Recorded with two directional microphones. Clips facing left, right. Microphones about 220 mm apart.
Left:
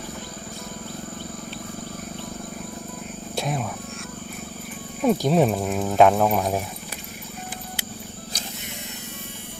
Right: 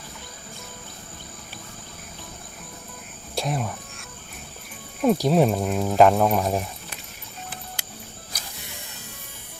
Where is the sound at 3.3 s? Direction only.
Centre (ahead or behind).